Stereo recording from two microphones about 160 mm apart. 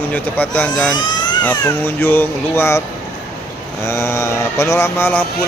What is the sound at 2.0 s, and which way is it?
Speech, 15° left (ahead or behind).